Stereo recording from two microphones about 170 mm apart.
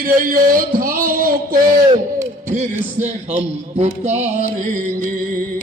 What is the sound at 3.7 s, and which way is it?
Music, 40° right (ahead or behind).